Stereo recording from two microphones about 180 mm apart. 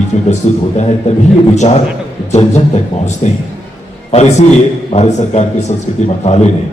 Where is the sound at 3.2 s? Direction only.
35° left (ahead or behind).